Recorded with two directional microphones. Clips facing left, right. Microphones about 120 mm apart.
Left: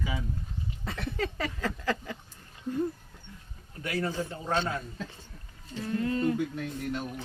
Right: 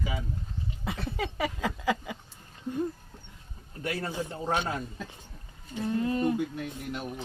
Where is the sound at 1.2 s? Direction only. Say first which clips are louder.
Right 1 dB; 10° right (ahead or behind).